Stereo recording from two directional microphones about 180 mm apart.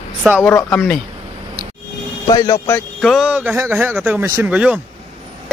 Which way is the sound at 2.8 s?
Centre (ahead or behind).